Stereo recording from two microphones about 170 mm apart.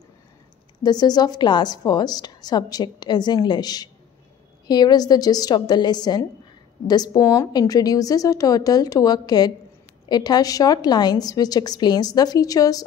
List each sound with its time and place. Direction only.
0.8 s a woman's voice: 25° left (ahead or behind)